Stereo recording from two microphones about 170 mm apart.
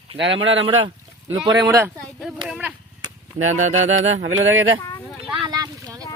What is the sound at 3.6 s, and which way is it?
Speech, 45° right (ahead or behind).